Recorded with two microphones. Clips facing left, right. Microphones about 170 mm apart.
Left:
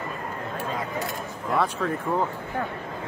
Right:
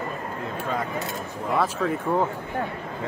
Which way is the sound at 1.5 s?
Centre (ahead or behind).